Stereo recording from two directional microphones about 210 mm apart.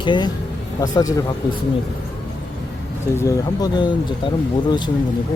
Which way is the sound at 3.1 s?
15° left (ahead or behind).